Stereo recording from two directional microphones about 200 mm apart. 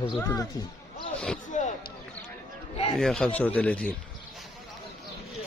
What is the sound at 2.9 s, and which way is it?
Speech, centre (ahead or behind).